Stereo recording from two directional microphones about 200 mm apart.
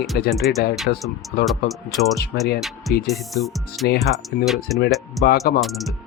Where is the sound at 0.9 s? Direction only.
50° left (ahead or behind).